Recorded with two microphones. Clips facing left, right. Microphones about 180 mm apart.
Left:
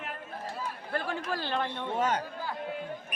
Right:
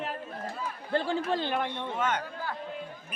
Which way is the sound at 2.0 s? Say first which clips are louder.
Left 1 dB; 35° left (ahead or behind).